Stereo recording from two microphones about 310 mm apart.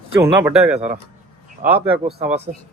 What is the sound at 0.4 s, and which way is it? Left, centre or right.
Speech, centre.